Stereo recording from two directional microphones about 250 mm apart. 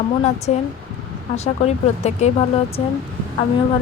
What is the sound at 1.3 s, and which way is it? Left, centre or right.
Speech, left.